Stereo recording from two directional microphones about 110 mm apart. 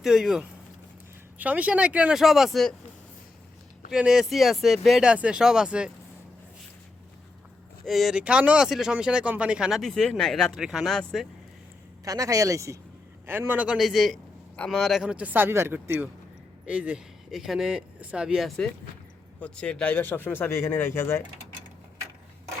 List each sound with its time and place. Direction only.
0.0 s speech: 5° right (ahead or behind)
3.9 s speech: 5° right (ahead or behind)
7.9 s speech: centre (ahead or behind)
12.0 s a man's voice: 30° right (ahead or behind); by 13.7 s 15° right (ahead or behind)
13.7 s speech: centre (ahead or behind); by 21.2 s 20° left (ahead or behind)